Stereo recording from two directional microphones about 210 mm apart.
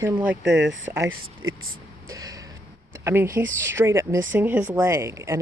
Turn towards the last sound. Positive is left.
turn(degrees=-15)  # may be behind; listen again after turning